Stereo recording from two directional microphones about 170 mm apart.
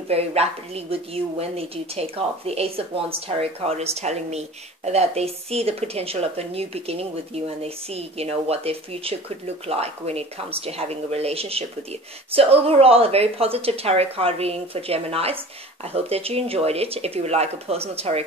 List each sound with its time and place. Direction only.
0.1 s a woman's voice: 35° right (ahead or behind)